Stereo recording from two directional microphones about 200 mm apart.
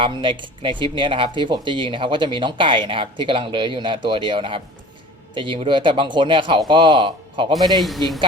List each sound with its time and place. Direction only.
0.0 s speech: 25° right (ahead or behind)
7.8 s speech: centre (ahead or behind)